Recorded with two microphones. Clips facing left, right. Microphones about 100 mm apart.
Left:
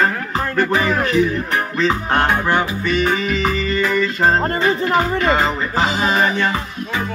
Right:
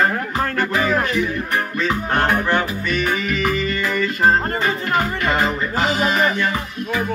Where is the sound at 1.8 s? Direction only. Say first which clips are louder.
Left 3 dB; 20° left (ahead or behind).